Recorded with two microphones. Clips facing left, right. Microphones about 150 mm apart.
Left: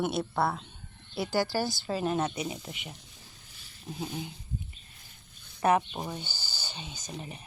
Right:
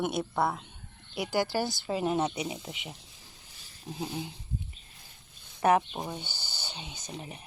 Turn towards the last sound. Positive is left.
turn(degrees=-15)  # may be behind; listen again after turning